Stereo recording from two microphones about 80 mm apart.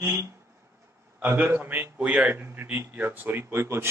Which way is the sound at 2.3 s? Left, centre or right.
Right.